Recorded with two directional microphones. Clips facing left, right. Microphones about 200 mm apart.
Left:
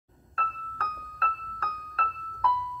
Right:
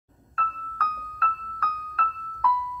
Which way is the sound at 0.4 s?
30° left (ahead or behind).